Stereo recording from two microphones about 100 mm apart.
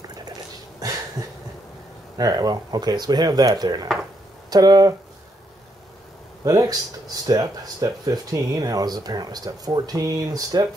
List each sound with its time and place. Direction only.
0.1 s a sound: 45° right (ahead or behind)
1.2 s cough: 5° right (ahead or behind)
2.1 s speech: 40° right (ahead or behind)
6.4 s speech: 35° right (ahead or behind)